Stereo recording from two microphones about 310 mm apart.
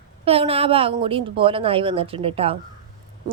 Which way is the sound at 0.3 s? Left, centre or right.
Centre.